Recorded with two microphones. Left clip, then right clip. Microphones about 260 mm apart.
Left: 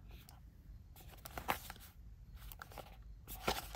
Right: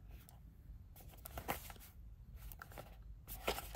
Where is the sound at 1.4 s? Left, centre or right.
Centre.